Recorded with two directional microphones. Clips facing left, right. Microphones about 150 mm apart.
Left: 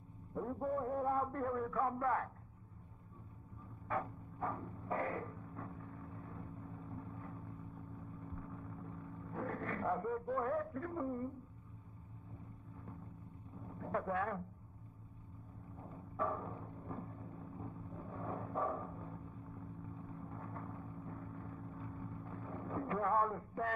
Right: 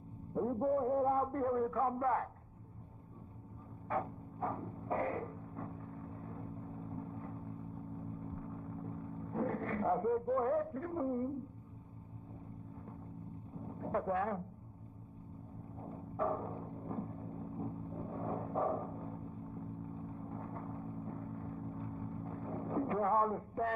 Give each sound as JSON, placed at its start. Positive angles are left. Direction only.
{"t": 0.3, "sound": "a man's voice", "side_deg": -25}
{"t": 3.9, "sound": "music", "side_deg": -25}
{"t": 13.6, "sound": "a sound", "side_deg": -25}
{"t": 15.8, "sound": "timpani", "side_deg": -30}